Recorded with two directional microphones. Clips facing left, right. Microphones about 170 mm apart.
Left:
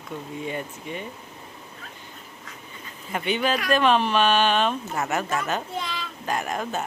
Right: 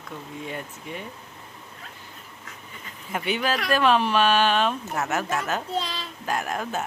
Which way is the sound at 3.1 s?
5° right (ahead or behind).